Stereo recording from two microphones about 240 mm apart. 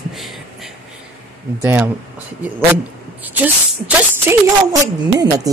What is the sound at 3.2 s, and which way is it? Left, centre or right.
Speech, centre.